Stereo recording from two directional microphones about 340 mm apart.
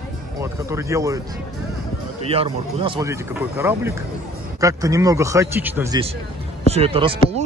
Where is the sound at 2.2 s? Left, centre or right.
Centre.